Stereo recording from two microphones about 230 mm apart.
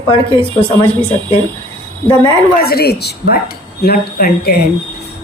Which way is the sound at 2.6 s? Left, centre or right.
Left.